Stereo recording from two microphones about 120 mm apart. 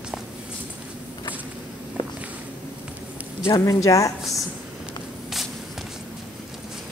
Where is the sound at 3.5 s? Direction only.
30° left (ahead or behind).